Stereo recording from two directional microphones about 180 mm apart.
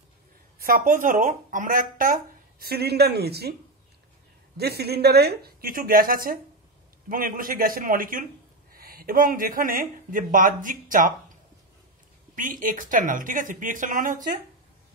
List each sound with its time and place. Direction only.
0.6 s speech: 55° right (ahead or behind)
2.6 s speech: 60° right (ahead or behind)
4.6 s speech: 65° right (ahead or behind); by 11.1 s 50° right (ahead or behind)
12.4 s speech: 50° right (ahead or behind)